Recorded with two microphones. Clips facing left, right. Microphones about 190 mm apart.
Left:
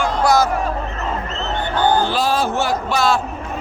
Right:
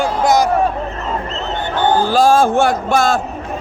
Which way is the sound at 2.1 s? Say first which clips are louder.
Right 7 dB; 45° right (ahead or behind).